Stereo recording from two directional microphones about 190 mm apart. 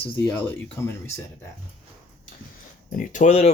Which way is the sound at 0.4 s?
15° left (ahead or behind).